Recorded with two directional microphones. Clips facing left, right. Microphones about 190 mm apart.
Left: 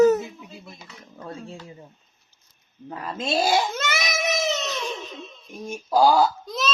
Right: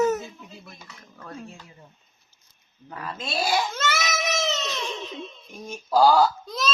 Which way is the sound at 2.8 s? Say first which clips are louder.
Left 6 dB; 25° left (ahead or behind).